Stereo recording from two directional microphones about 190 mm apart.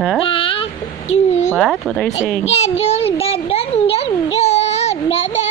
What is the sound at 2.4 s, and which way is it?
Speech, 35° left (ahead or behind).